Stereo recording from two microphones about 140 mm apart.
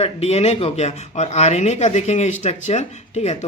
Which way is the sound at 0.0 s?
50° left (ahead or behind).